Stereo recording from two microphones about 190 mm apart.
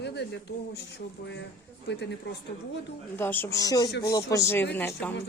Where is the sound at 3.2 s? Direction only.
10° left (ahead or behind).